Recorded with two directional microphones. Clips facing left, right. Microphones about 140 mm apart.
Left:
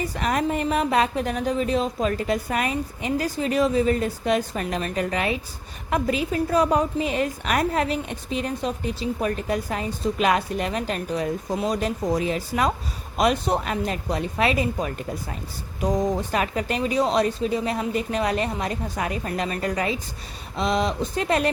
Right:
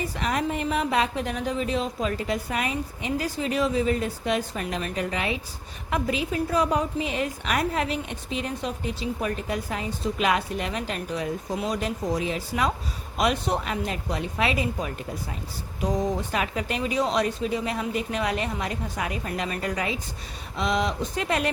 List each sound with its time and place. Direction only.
0.2 s a woman's voice: 45° left (ahead or behind)